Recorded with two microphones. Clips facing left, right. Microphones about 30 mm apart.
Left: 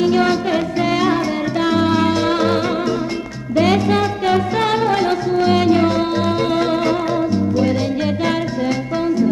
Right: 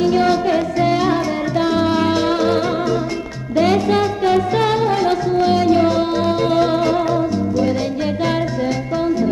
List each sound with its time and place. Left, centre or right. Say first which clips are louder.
0.8 s music: left 1 dB; left
2.3 s music: even; left
4.0 s music: right 1 dB; left